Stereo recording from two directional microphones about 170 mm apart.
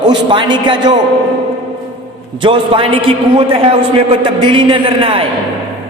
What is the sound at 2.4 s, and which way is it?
Speech, 30° right (ahead or behind).